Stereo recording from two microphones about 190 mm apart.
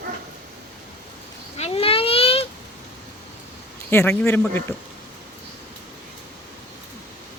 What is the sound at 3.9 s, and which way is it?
Speech, 15° left (ahead or behind).